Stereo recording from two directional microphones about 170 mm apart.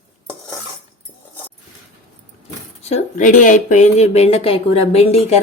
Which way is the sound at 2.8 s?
45° left (ahead or behind).